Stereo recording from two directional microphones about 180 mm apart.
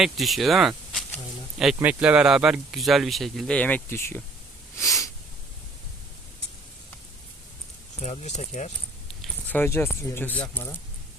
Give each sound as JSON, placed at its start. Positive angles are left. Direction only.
{"t": 0.0, "sound": "speech", "side_deg": 0}
{"t": 8.0, "sound": "speech", "side_deg": 40}
{"t": 9.2, "sound": "speech", "side_deg": 10}